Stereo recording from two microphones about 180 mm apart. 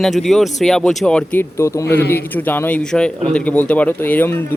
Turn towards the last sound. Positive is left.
turn(degrees=10)  # may be behind; listen again after turning